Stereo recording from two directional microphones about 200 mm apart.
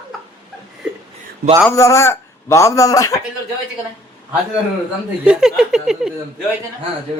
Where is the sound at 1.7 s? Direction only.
15° left (ahead or behind).